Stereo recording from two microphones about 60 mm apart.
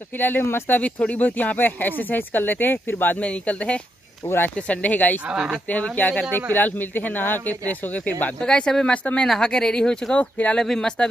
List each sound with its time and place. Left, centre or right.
0.2 s speech: left
0.7 s speech: left
5.3 s speech: centre
5.7 s speech: left
8.4 s speech: centre
10.3 s speech: left
10.6 s speech: centre